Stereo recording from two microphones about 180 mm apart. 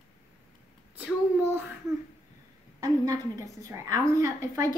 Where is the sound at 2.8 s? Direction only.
20° right (ahead or behind).